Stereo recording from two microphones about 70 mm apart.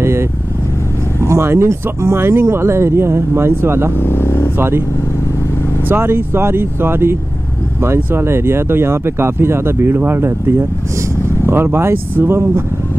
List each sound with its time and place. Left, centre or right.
0.0 s vehicle: right
1.2 s speech: right
4.0 s speech: left
4.6 s speech: right
5.9 s speech: right
11.4 s speech: right